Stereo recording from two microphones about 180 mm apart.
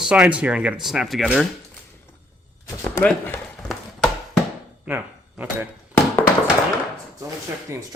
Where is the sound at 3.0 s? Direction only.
5° left (ahead or behind).